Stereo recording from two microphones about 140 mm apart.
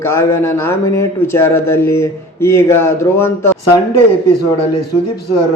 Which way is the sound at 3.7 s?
30° left (ahead or behind).